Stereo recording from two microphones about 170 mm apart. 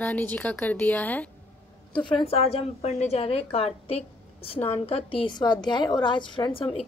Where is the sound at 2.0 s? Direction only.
30° left (ahead or behind).